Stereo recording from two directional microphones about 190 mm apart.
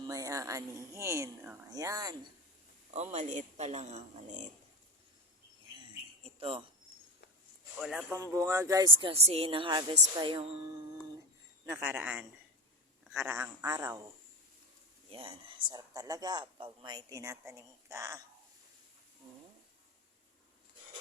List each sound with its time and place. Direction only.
0.0 s speech: 20° right (ahead or behind)
2.9 s speech: 35° right (ahead or behind)
6.2 s speech: 30° right (ahead or behind)
7.8 s speech: centre (ahead or behind)
8.1 s speech: 15° right (ahead or behind)
11.6 s speech: 15° right (ahead or behind)
15.1 s speech: 30° right (ahead or behind)